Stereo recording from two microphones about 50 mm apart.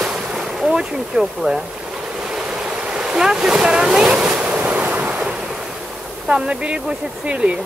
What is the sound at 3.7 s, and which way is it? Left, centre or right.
Waves, centre.